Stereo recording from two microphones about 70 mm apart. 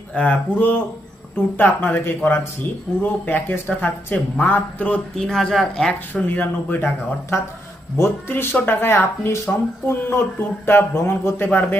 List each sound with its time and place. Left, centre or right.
0.1 s a man's voice: left
5.1 s speech: centre
6.2 s a man's voice: left
11.4 s a man's voice: left